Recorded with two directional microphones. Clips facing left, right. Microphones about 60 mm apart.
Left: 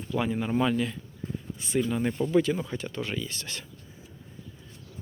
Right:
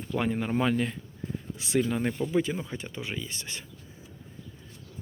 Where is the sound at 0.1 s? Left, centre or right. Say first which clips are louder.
Left 1 dB; right.